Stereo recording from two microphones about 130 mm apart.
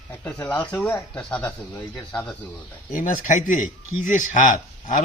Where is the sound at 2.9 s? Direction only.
90° left.